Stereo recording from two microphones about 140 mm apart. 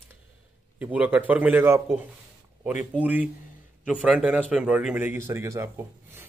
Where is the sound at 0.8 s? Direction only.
10° right (ahead or behind).